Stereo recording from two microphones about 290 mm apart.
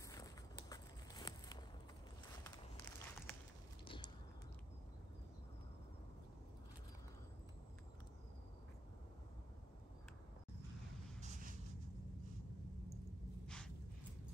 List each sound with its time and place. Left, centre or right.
0.1 s walk: centre
3.8 s a sound: centre
11.1 s vehicle: right